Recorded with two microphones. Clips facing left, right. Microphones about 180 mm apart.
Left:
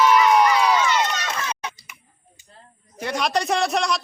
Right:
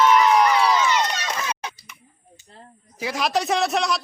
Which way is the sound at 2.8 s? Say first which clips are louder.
Even; centre (ahead or behind).